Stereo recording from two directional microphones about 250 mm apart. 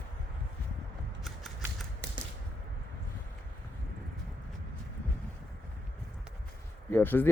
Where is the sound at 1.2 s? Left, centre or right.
Centre.